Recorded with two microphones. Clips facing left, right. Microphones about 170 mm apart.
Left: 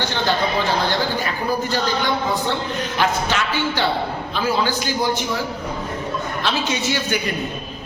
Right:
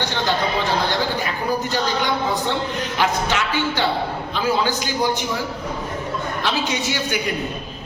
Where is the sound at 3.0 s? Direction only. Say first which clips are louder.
Even; 15° right (ahead or behind).